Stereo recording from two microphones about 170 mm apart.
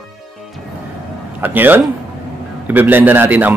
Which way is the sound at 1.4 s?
10° right (ahead or behind).